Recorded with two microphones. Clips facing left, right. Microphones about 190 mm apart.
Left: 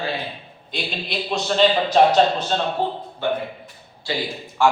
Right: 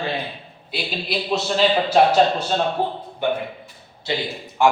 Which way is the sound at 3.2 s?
15° right (ahead or behind).